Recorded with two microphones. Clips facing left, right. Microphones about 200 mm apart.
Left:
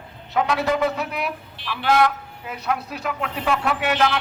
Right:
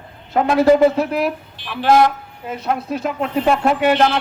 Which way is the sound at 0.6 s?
35° right (ahead or behind).